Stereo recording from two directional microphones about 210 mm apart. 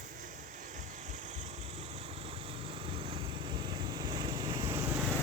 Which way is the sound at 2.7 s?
25° right (ahead or behind).